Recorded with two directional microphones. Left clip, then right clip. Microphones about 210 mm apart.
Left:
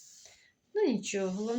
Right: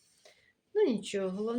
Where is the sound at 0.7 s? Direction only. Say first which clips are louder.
Right 1 dB; centre (ahead or behind).